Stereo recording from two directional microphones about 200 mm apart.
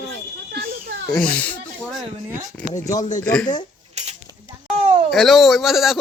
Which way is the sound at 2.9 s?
40° left (ahead or behind).